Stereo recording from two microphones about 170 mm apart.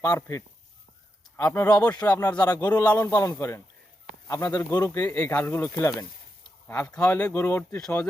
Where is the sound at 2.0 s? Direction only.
20° left (ahead or behind).